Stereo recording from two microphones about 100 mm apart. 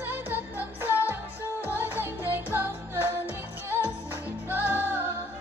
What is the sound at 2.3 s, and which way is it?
Music, 20° right (ahead or behind).